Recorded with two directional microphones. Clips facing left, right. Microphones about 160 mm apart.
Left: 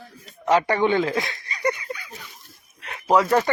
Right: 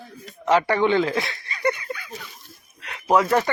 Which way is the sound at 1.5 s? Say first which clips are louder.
Right 2 dB; 25° left (ahead or behind).